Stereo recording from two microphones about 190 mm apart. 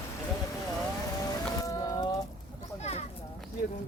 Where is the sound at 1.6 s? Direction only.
20° left (ahead or behind).